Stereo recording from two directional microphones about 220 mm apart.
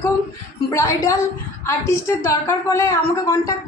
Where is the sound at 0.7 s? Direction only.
15° left (ahead or behind).